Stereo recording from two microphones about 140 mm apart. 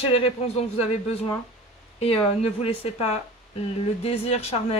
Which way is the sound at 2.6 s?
45° left (ahead or behind).